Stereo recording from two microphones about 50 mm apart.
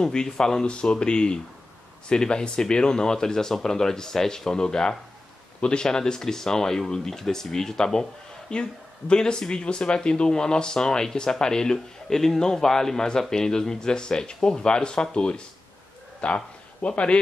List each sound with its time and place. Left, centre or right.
0.0 s speech: centre